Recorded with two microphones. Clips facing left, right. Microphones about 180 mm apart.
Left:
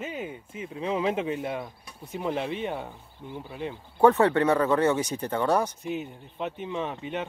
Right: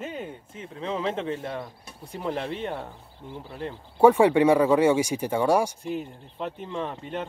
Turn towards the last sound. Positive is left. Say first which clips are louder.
# even
turn(degrees=5)  # may be behind; listen again after turning